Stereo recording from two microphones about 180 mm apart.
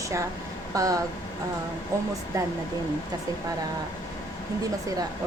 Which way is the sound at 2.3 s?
15° right (ahead or behind).